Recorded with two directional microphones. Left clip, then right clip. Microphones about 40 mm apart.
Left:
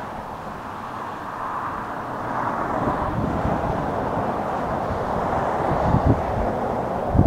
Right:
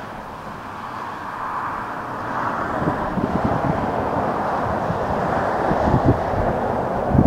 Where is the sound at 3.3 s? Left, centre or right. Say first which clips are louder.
Right 2 dB; right.